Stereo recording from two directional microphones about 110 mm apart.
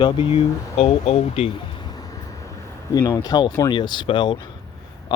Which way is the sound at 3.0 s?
35° left (ahead or behind).